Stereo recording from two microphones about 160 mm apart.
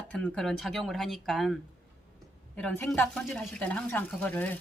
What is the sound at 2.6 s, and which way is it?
Speech, 5° left (ahead or behind).